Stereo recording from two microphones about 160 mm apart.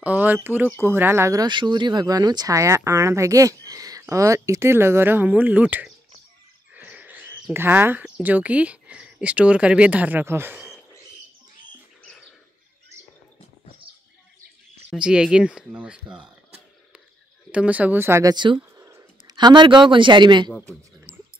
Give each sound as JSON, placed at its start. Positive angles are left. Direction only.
{"t": 0.0, "sound": "speech", "side_deg": -10}
{"t": 12.0, "sound": "bird", "side_deg": 5}
{"t": 14.9, "sound": "speech", "side_deg": -5}
{"t": 17.5, "sound": "speech", "side_deg": -10}
{"t": 18.3, "sound": "speech", "side_deg": -30}
{"t": 18.8, "sound": "a sound", "side_deg": -15}
{"t": 19.3, "sound": "speech", "side_deg": -30}